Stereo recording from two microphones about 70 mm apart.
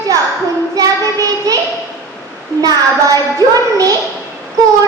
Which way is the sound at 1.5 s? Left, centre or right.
Right.